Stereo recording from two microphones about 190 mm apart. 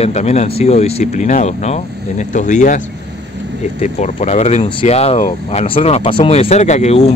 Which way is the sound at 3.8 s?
40° left (ahead or behind).